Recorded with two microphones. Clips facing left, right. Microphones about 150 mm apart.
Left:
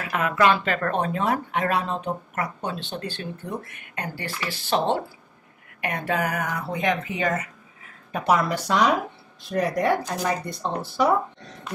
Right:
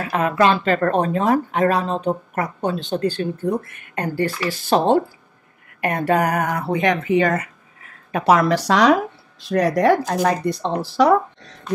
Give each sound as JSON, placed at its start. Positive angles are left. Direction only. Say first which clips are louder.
{"t": 0.0, "sound": "speech", "louder": "right 4 dB", "side_deg": -35}
{"t": 8.1, "sound": "speech", "louder": "right 6 dB", "side_deg": -80}